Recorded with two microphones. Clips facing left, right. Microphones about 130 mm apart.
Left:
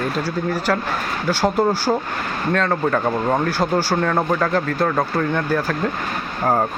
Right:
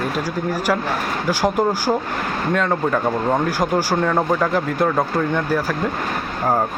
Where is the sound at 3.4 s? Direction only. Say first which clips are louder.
Even; 15° right (ahead or behind).